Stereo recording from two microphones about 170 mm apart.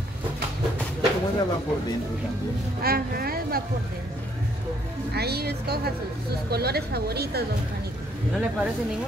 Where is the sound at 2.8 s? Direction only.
65° right (ahead or behind).